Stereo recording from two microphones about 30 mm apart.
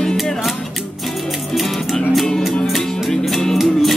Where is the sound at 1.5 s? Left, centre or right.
Centre.